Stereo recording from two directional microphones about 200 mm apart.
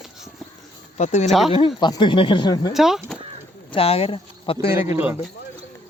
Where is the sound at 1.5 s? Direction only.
25° left (ahead or behind).